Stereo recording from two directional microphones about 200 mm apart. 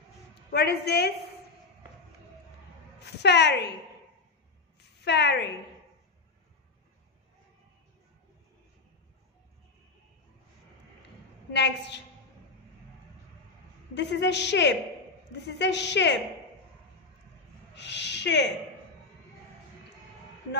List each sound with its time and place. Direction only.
0.5 s a woman's voice: 55° left (ahead or behind)
3.0 s a woman's voice: 60° left (ahead or behind)
5.0 s a woman's voice: 55° left (ahead or behind)
11.5 s a woman's voice: 60° left (ahead or behind)
13.9 s a woman's voice: 60° left (ahead or behind)
17.7 s speech: 60° left (ahead or behind)